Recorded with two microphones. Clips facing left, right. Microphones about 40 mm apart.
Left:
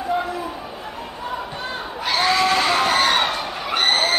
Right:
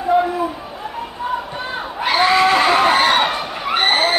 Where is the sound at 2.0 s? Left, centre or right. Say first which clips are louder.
Right 5 dB; centre.